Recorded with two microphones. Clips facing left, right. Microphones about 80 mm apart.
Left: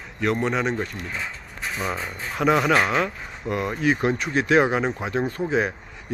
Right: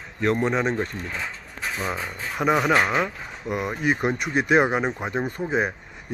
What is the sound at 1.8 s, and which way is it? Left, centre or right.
Speech, centre.